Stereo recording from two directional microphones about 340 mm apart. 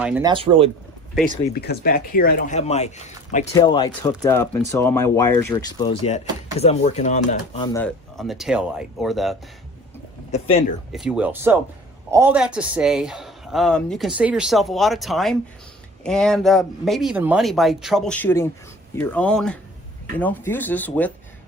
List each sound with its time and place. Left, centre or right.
0.0 s speech: centre
1.5 s speech: left; by 9.3 s centre
10.3 s speech: centre
10.9 s speech: centre